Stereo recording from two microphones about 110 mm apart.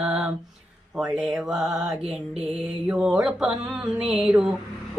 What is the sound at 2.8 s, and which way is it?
Music, 5° right (ahead or behind).